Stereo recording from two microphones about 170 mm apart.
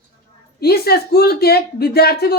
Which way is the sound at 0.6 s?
65° left (ahead or behind).